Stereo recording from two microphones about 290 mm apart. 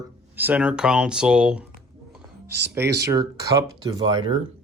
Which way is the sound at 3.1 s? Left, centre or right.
Centre.